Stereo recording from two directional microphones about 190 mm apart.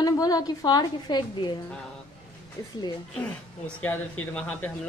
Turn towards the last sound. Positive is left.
turn(degrees=5)  # may be behind; listen again after turning